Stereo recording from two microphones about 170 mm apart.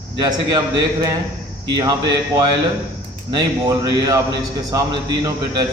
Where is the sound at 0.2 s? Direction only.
25° right (ahead or behind).